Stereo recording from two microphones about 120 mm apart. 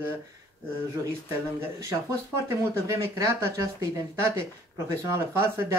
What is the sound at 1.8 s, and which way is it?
Speech, 25° right (ahead or behind).